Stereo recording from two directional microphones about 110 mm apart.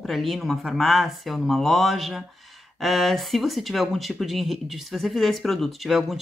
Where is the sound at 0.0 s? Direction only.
Centre (ahead or behind).